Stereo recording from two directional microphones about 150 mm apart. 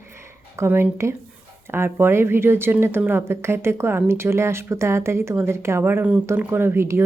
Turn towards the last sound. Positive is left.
turn(degrees=-15)  # may be behind; listen again after turning